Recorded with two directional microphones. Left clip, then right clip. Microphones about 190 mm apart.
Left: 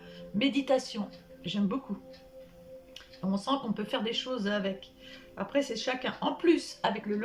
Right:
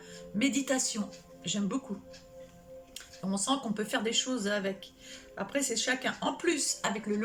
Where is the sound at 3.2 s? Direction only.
10° left (ahead or behind).